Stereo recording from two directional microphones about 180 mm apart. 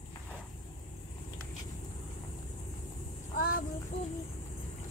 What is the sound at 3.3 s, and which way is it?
Child singing, 55° left (ahead or behind).